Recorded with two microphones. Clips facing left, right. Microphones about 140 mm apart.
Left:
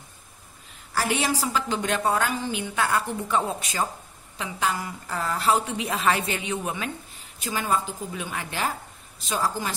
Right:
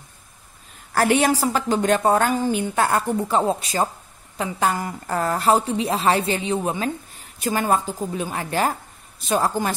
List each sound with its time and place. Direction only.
0.9 s a woman's voice: 55° right (ahead or behind); by 3.9 s 35° right (ahead or behind)
4.4 s a woman's voice: 45° right (ahead or behind); by 6.9 s 30° right (ahead or behind)
7.3 s a woman's voice: 50° right (ahead or behind)